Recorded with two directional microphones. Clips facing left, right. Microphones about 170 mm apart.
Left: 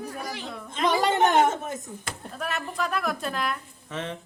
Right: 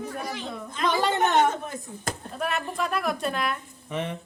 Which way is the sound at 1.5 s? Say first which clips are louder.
Left 1 dB; 20° left (ahead or behind).